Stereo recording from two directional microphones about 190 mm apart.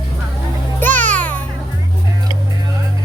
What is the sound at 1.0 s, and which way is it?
Music, 10° left (ahead or behind).